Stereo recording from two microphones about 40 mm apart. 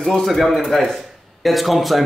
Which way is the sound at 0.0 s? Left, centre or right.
Centre.